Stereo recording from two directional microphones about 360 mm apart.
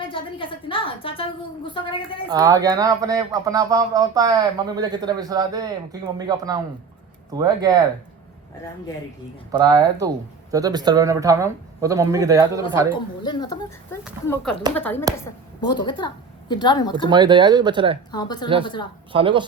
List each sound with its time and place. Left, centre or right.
0.0 s a woman's voice: centre
2.3 s speech: centre
9.5 s speech: centre
13.2 s a woman's voice: centre
17.1 s speech: centre
18.1 s a woman's voice: centre
19.1 s speech: centre